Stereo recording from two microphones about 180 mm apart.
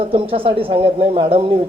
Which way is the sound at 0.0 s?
30° right (ahead or behind).